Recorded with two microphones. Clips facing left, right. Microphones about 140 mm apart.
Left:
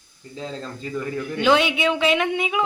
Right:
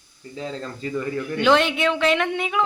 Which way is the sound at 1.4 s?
5° left (ahead or behind).